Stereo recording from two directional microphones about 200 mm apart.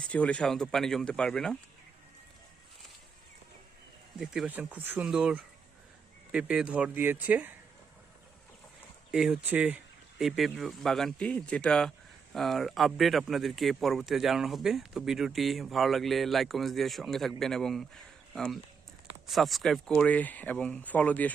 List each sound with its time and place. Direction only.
0.1 s speech: 5° left (ahead or behind)
4.2 s speech: 5° right (ahead or behind)
9.1 s speech: 5° right (ahead or behind)